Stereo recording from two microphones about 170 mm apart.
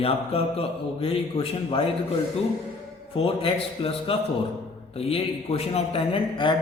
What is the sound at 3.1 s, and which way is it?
Speech, 35° left (ahead or behind).